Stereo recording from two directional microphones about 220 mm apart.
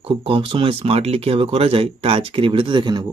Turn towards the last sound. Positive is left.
turn(degrees=-20)  # may be behind; listen again after turning